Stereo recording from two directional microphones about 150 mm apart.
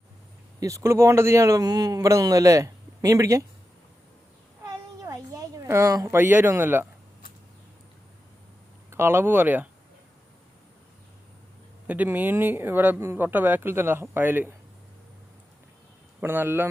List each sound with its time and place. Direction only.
0.6 s speech: 20° right (ahead or behind)
4.6 s a sound: 25° right (ahead or behind)
8.9 s speech: 15° right (ahead or behind)
11.9 s speech: 10° right (ahead or behind)
16.2 s speech: 15° right (ahead or behind)